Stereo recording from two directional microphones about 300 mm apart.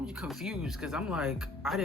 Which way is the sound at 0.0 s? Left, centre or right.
Centre.